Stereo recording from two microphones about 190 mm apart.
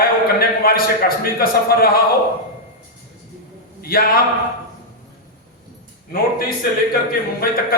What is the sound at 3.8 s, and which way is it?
Speech, 50° left (ahead or behind).